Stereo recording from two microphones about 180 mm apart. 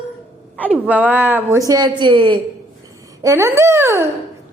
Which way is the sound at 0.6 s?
10° left (ahead or behind).